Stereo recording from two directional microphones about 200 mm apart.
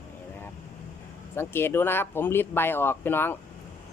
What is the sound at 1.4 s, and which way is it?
Speech, 10° left (ahead or behind).